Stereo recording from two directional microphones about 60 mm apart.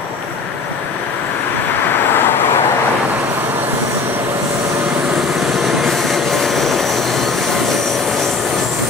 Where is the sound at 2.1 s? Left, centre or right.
Left.